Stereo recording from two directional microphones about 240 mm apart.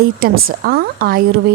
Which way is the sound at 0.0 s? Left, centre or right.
Right.